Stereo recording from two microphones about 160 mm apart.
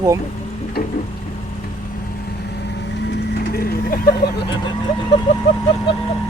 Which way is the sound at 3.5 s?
70° left (ahead or behind).